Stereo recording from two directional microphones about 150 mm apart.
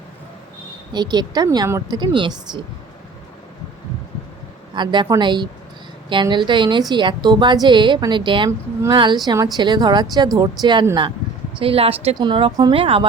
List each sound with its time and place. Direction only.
0.9 s speech: 30° right (ahead or behind)
4.7 s a woman's voice: 30° right (ahead or behind)
8.4 s speech: 20° right (ahead or behind)
11.6 s a woman's voice: 40° right (ahead or behind)